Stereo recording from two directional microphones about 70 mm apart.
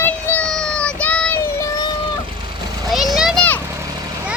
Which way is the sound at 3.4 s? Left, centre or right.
Left.